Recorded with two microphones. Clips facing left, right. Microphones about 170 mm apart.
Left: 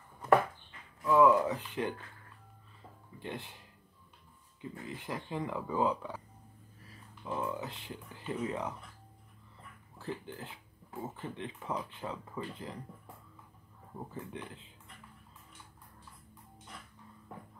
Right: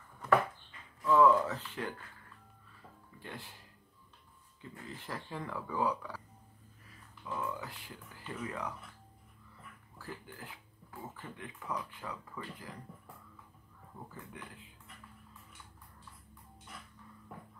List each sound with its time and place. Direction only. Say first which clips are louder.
1.0 s speech: left 1 dB; 15° left (ahead or behind)
3.2 s speech: left 6 dB; 20° left (ahead or behind)
4.6 s speech: left 4 dB; 15° left (ahead or behind)
7.2 s speech: left 3 dB; 25° left (ahead or behind)
9.9 s speech: left 6 dB; 25° left (ahead or behind)